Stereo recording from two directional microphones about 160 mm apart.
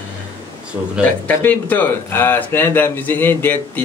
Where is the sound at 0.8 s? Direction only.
20° right (ahead or behind).